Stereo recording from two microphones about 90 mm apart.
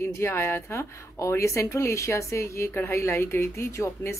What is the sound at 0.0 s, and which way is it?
Speech, 30° left (ahead or behind).